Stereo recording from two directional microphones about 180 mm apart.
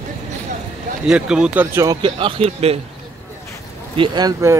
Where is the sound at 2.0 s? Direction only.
30° right (ahead or behind).